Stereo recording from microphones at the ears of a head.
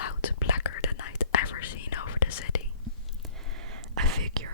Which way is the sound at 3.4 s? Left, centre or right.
Right.